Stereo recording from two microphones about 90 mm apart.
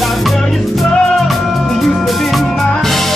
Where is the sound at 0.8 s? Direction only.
Centre (ahead or behind).